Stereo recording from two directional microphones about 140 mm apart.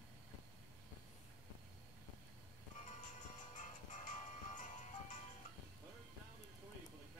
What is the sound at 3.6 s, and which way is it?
Music, 60° left (ahead or behind).